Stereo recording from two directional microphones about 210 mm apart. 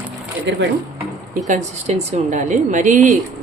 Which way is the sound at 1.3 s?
35° right (ahead or behind).